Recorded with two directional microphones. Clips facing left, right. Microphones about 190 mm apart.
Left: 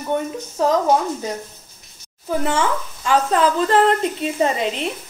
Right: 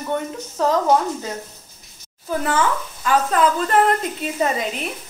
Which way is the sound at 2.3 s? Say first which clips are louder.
Left 1 dB; 25° left (ahead or behind).